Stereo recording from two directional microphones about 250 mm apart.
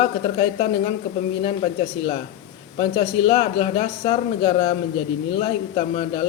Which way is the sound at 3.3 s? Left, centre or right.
Left.